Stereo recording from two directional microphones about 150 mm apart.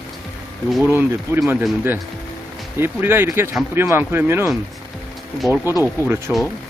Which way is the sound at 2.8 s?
15° right (ahead or behind).